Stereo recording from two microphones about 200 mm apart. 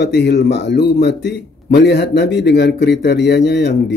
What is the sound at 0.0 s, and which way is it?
Speech, 55° left (ahead or behind).